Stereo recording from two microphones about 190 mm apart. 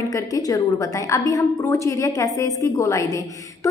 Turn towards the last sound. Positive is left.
turn(degrees=15)  # may be behind; listen again after turning